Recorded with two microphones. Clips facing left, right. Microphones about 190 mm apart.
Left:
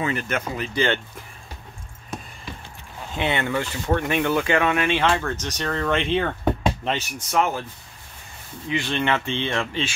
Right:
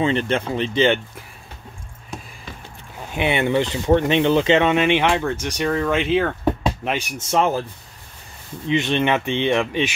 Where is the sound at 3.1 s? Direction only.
15° right (ahead or behind).